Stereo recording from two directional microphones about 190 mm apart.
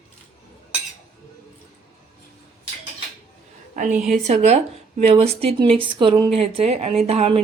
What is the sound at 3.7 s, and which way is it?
A woman's voice, 40° right (ahead or behind).